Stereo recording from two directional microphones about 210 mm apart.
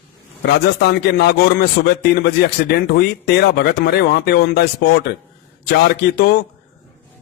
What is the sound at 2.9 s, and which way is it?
Speech, 50° left (ahead or behind).